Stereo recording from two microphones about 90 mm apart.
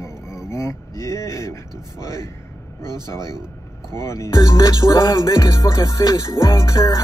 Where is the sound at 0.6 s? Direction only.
35° left (ahead or behind).